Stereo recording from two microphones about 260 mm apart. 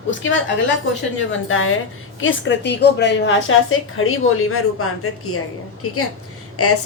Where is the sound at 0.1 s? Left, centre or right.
Left.